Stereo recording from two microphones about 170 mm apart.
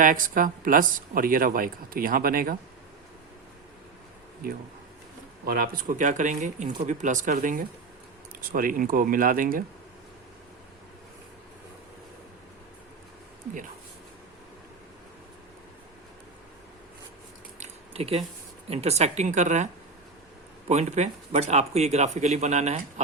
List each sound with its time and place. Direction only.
0.0 s speech: 50° right (ahead or behind)
5.5 s speech: 55° right (ahead or behind)
17.6 s a sound: 35° right (ahead or behind)
18.7 s speech: 40° right (ahead or behind)
20.7 s speech: 40° right (ahead or behind)